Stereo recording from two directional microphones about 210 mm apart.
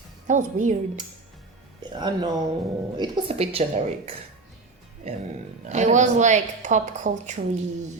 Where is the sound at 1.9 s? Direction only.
20° right (ahead or behind).